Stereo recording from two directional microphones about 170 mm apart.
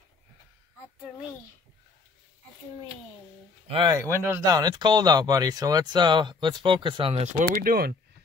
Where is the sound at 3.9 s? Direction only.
15° right (ahead or behind); by 7.5 s 40° right (ahead or behind).